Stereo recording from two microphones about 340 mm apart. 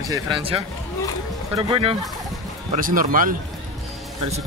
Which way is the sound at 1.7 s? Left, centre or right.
Centre.